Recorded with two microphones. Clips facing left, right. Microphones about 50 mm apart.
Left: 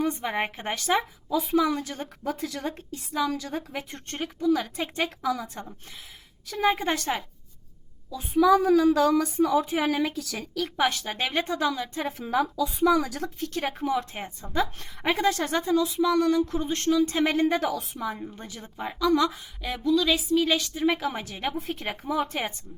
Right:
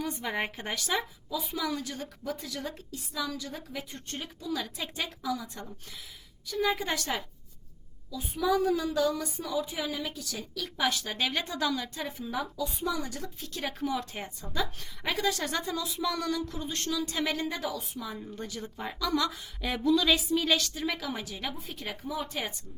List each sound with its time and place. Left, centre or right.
0.0 s a woman's voice: left
2.2 s speech: left
2.7 s speech: left
3.3 s speech: left
6.7 s a woman's voice: left
8.9 s a woman's voice: left
10.6 s a woman's voice: left
12.2 s speech: left
13.4 s a woman's voice: left
15.6 s a woman's voice: centre
16.5 s a woman's voice: left
18.2 s a woman's voice: left
19.6 s speech: centre
20.8 s a woman's voice: left